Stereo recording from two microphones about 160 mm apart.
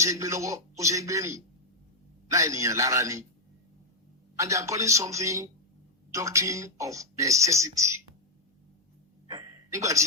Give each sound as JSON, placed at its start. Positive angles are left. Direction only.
{"t": 0.0, "sound": "speech", "side_deg": -20}
{"t": 4.4, "sound": "speech", "side_deg": -20}
{"t": 9.2, "sound": "a sound", "side_deg": -25}